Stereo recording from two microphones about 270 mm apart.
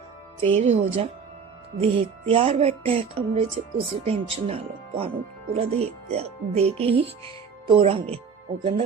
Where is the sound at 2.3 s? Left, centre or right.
Right.